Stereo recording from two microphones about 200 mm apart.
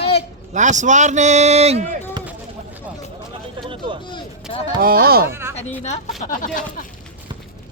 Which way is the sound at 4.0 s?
25° left (ahead or behind).